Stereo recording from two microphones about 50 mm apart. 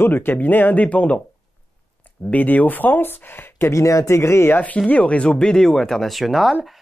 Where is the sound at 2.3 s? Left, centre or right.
Left.